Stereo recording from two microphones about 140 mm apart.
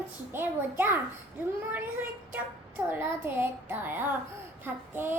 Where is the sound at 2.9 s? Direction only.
15° right (ahead or behind).